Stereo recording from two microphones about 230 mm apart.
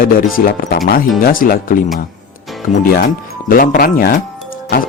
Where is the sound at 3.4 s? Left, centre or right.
Left.